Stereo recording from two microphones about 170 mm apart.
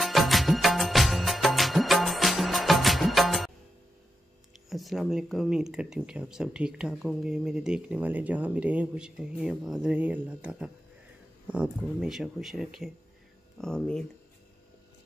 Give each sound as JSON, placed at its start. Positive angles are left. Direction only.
{"t": 0.0, "sound": "music of bollywood", "side_deg": 0}
{"t": 4.6, "sound": "speech", "side_deg": 0}